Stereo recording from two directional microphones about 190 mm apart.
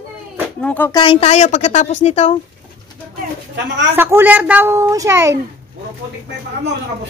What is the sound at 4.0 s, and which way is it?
A woman's voice, 10° right (ahead or behind).